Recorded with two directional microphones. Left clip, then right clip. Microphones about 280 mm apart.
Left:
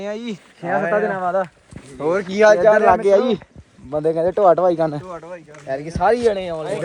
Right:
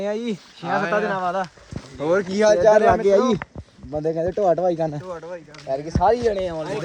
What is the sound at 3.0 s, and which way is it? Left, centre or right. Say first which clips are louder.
Speech: left 2 dB; centre.